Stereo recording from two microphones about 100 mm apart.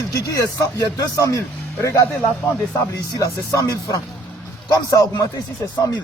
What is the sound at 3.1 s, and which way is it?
Speech, 35° left (ahead or behind).